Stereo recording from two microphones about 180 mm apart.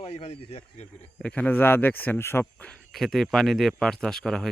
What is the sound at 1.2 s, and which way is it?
Speech, 5° left (ahead or behind).